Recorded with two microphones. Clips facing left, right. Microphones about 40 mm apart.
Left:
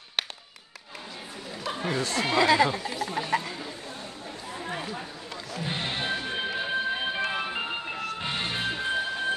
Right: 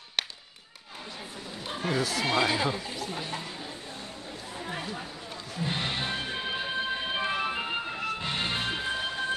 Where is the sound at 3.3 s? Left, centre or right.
Left.